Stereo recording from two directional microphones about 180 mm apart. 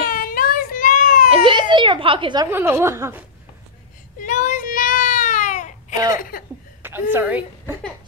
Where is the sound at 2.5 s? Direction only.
10° right (ahead or behind).